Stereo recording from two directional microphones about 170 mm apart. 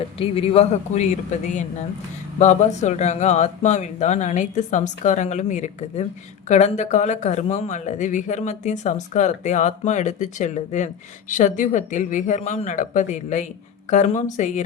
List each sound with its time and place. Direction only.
0.2 s speech: 35° left (ahead or behind)